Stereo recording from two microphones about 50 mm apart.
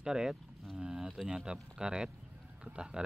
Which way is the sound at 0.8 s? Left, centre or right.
Centre.